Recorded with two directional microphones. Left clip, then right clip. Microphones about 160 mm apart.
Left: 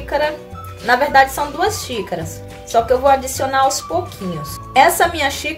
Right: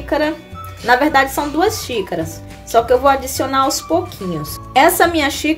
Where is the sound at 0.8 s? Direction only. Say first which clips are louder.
Even; 40° right (ahead or behind).